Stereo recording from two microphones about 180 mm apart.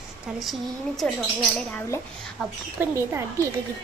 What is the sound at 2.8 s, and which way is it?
Speech, 15° right (ahead or behind).